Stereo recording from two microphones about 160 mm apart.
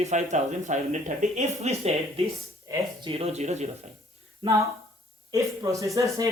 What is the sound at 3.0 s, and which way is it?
Speech, 40° right (ahead or behind).